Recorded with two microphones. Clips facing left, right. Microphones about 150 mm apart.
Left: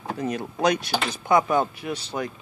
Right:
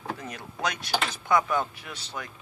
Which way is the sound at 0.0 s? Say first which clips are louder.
Left 8 dB; 25° left (ahead or behind).